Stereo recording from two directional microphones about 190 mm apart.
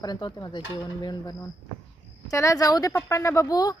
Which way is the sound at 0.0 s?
20° left (ahead or behind).